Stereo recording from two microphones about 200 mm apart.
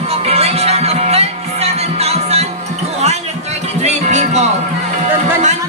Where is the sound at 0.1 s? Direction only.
30° right (ahead or behind).